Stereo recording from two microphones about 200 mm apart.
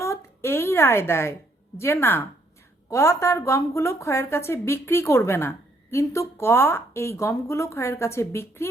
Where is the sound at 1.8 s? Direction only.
10° left (ahead or behind).